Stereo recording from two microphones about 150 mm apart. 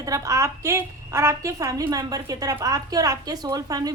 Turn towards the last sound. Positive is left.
turn(degrees=-25)  # may be behind; listen again after turning